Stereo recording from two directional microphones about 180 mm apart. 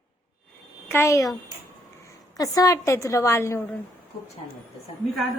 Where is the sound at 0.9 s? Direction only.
15° left (ahead or behind).